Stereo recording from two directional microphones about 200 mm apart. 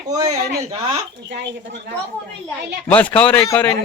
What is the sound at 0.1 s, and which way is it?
Speech, 20° right (ahead or behind).